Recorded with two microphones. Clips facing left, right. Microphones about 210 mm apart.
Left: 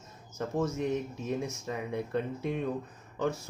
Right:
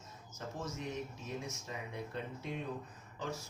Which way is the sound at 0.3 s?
60° left (ahead or behind).